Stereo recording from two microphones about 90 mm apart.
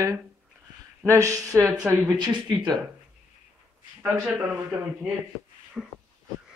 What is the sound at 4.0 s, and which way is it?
Speech, 10° right (ahead or behind).